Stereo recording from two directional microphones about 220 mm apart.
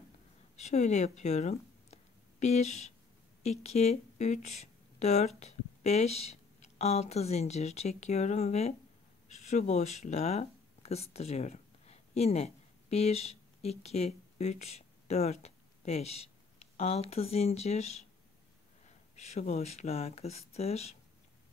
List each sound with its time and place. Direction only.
0.6 s a woman's voice: 30° left (ahead or behind)